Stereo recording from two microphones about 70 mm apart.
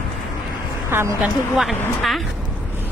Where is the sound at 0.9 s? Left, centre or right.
Right.